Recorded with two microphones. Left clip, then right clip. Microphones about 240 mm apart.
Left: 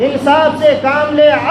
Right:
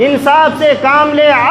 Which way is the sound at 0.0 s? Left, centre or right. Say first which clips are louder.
Right 2 dB; right.